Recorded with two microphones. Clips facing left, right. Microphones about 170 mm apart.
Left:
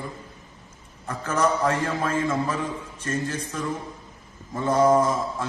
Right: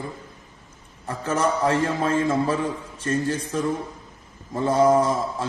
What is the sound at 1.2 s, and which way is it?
A man's voice, 25° right (ahead or behind).